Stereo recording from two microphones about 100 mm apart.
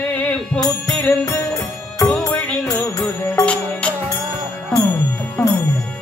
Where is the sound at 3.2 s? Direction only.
25° left (ahead or behind).